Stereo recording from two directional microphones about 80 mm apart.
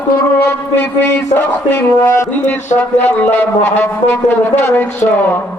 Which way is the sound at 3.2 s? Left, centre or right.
Left.